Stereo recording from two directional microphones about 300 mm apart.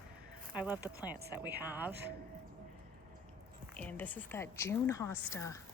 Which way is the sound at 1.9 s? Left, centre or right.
Right.